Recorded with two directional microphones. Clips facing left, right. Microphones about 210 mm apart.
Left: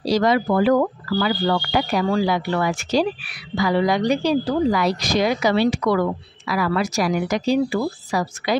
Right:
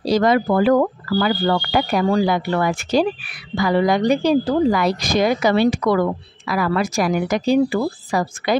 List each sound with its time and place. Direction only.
0.0 s speech: 55° right (ahead or behind)